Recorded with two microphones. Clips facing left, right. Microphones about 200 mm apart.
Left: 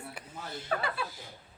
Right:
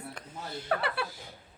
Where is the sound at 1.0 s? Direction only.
70° right (ahead or behind).